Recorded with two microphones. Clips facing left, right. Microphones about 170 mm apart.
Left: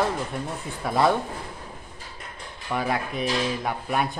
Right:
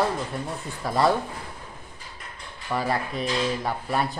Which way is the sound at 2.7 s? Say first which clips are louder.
Even; centre (ahead or behind).